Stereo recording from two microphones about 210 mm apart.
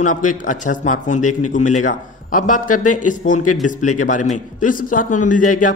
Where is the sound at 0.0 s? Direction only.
35° left (ahead or behind).